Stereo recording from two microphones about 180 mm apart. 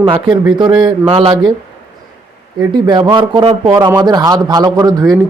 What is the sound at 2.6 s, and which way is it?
Speech, 25° right (ahead or behind).